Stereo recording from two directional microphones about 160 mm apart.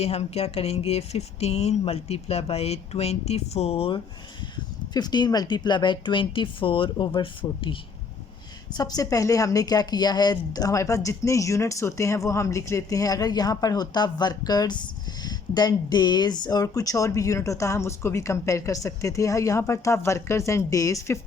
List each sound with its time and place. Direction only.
0.0 s a woman's voice: 40° left (ahead or behind); by 21.2 s 20° left (ahead or behind)